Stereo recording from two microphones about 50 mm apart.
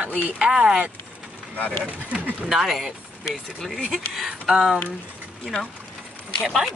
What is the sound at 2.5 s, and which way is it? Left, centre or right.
Speech, centre.